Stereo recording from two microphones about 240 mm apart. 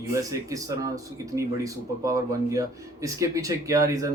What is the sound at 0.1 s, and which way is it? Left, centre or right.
Speech, centre.